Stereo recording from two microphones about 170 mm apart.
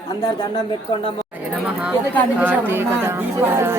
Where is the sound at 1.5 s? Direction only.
5° right (ahead or behind).